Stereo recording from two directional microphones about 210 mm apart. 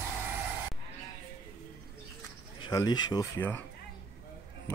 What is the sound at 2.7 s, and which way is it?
Speech, 20° left (ahead or behind).